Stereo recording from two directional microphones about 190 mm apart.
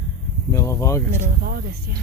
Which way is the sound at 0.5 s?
15° left (ahead or behind).